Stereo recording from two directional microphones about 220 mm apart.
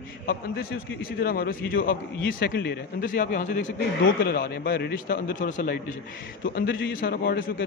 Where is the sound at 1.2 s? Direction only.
45° left (ahead or behind).